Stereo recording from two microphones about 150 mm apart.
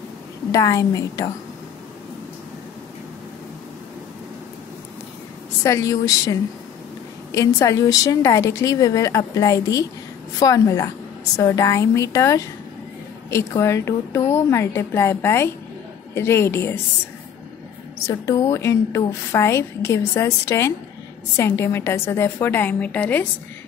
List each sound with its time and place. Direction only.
0.5 s a woman's voice: 25° left (ahead or behind)
5.6 s a woman's voice: 20° left (ahead or behind)
18.0 s a woman's voice: 20° left (ahead or behind)